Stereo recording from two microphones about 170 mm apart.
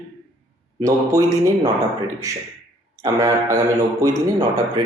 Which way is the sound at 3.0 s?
25° right (ahead or behind).